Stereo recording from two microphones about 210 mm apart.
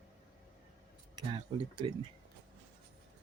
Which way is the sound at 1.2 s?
25° right (ahead or behind).